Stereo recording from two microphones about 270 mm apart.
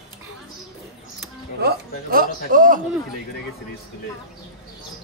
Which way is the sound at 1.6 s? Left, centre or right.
Right.